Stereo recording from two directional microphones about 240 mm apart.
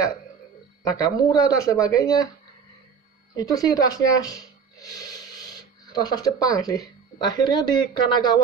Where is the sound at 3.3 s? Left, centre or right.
Centre.